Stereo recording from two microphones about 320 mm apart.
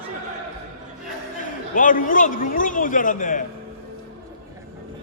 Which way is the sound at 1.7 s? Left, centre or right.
Left.